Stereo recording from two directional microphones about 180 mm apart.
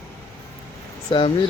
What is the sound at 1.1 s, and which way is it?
Speech, 30° left (ahead or behind).